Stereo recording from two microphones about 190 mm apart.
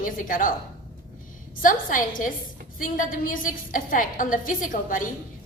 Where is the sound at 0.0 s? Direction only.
45° left (ahead or behind).